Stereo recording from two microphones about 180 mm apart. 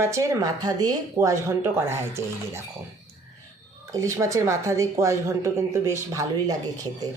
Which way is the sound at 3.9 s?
15° right (ahead or behind).